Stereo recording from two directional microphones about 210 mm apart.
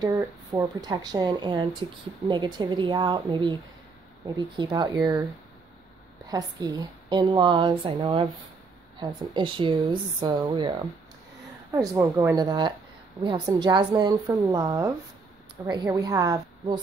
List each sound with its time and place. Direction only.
0.0 s a woman's voice: 15° right (ahead or behind)
6.2 s a woman's voice: 20° right (ahead or behind)